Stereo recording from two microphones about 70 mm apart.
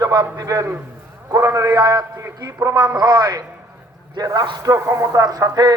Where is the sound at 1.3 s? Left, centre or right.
Right.